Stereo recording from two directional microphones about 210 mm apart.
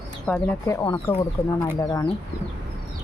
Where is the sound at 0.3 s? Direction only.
5° left (ahead or behind).